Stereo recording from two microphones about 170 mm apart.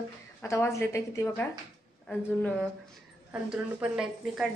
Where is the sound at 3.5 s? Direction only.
5° right (ahead or behind).